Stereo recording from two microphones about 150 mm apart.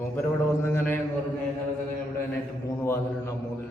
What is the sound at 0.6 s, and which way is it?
Speech, 15° left (ahead or behind).